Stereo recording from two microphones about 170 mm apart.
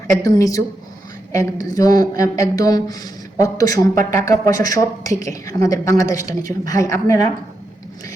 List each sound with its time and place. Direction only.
0.1 s a woman's voice: 20° left (ahead or behind)